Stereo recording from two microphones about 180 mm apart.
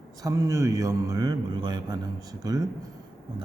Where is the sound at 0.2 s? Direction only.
20° right (ahead or behind).